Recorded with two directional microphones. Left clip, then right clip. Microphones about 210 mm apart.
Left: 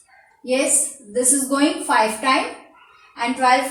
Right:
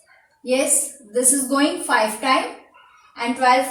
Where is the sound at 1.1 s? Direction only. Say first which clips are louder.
Even; 15° right (ahead or behind).